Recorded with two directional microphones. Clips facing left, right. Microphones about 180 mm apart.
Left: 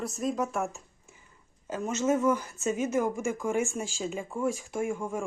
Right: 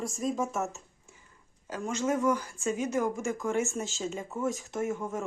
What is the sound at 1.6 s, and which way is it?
Speech, 25° left (ahead or behind).